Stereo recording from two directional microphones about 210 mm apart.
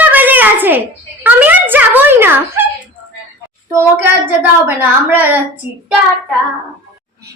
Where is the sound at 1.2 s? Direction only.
10° right (ahead or behind).